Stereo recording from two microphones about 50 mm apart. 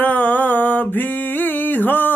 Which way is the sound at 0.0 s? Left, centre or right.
Left.